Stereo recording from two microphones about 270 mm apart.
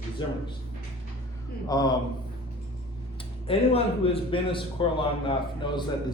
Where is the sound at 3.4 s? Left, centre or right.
Left.